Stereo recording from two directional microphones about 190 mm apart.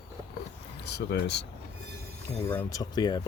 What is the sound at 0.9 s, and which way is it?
Speech, 60° left (ahead or behind).